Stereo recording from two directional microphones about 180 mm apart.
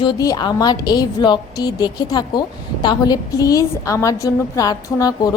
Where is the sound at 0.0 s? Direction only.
20° left (ahead or behind).